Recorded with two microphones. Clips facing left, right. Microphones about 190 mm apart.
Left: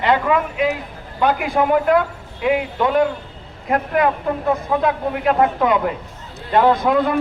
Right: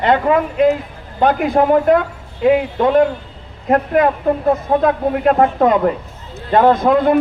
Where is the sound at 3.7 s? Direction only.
40° right (ahead or behind).